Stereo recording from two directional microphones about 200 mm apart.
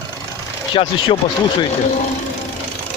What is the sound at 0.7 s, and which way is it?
Speech, 25° left (ahead or behind).